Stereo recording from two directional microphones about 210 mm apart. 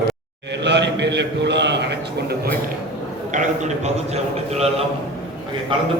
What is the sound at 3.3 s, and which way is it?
A man's voice, 35° right (ahead or behind).